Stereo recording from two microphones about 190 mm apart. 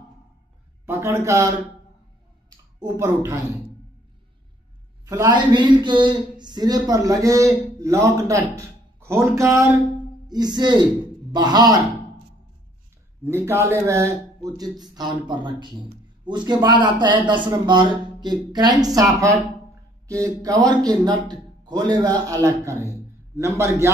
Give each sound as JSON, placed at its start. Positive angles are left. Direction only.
{"t": 0.8, "sound": "speech", "side_deg": -15}
{"t": 2.8, "sound": "a man's voice", "side_deg": -15}
{"t": 5.0, "sound": "a man's voice", "side_deg": -15}
{"t": 13.5, "sound": "a man's voice", "side_deg": -15}
{"t": 22.8, "sound": "a sound", "side_deg": -15}